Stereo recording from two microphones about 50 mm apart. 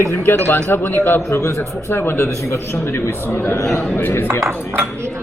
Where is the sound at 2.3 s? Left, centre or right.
Left.